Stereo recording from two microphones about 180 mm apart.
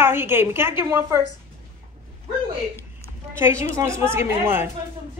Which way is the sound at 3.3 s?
15° right (ahead or behind).